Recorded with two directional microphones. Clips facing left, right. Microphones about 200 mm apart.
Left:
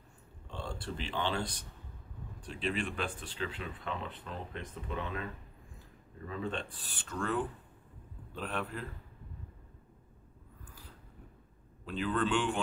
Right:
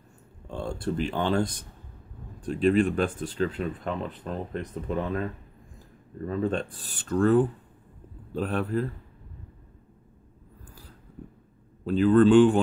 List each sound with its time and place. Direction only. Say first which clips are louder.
0.5 s speech: right 10 dB; 45° right (ahead or behind)
11.8 s speech: right 14 dB; 40° right (ahead or behind)